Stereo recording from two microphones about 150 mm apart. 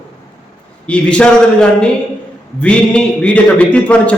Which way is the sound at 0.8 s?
5° left (ahead or behind).